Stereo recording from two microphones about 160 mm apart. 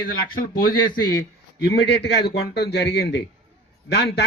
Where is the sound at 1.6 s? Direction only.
90° left.